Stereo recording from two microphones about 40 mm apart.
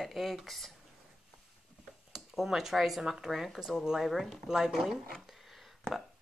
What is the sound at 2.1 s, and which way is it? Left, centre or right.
Speech, centre.